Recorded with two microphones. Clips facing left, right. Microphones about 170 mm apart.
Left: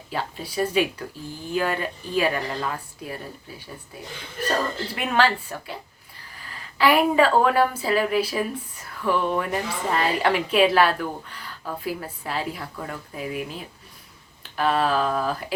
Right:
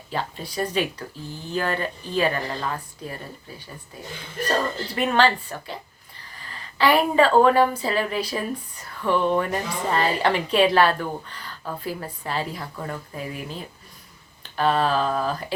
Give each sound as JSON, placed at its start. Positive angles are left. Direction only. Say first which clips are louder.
{"t": 0.1, "sound": "speech", "louder": "even", "side_deg": 5}
{"t": 4.9, "sound": "a woman's voice", "louder": "right 2 dB", "side_deg": 5}